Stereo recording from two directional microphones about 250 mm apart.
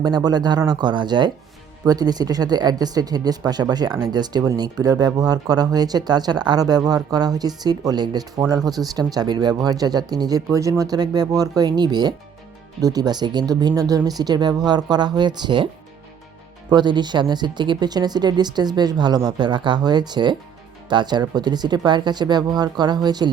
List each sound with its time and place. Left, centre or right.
0.0 s speech: centre